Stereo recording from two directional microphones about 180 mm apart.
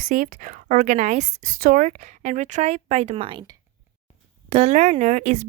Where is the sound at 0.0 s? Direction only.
45° right (ahead or behind).